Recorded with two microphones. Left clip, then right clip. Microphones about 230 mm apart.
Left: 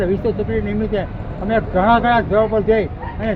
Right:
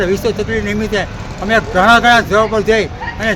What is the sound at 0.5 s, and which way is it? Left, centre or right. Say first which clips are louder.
Speech: right 4 dB; right.